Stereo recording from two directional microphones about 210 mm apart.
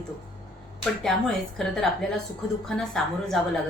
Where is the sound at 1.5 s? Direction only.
Centre (ahead or behind).